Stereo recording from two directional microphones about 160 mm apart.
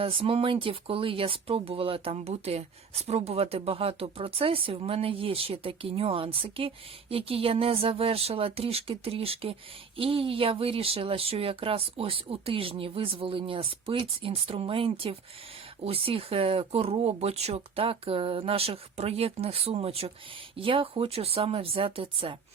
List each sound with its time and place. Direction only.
0.0 s speech: 35° right (ahead or behind)